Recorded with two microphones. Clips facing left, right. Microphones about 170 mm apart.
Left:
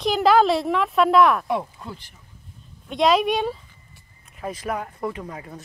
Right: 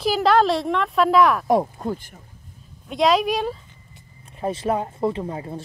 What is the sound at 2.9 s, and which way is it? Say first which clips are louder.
Speech: even; centre (ahead or behind).